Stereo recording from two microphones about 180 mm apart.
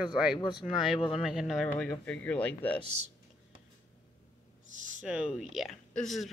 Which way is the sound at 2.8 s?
35° right (ahead or behind).